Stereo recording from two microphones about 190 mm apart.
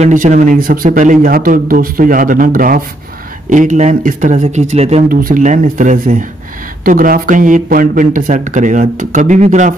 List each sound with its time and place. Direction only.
0.0 s speech: 40° right (ahead or behind)